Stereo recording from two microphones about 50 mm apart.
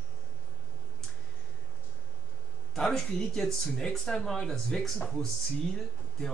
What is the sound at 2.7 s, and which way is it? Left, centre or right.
Speech, centre.